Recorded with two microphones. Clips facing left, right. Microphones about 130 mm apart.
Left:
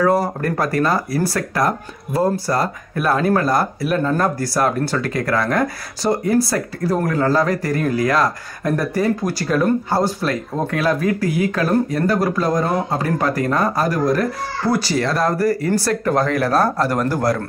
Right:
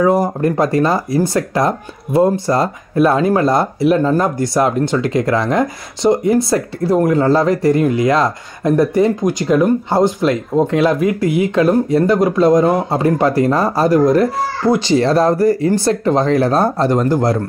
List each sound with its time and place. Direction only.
0.0 s speech: 15° right (ahead or behind)